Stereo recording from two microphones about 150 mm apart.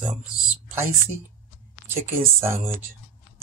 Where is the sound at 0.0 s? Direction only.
10° right (ahead or behind).